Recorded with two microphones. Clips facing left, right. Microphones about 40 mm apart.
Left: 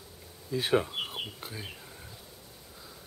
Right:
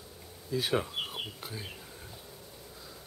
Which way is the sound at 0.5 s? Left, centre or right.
Left.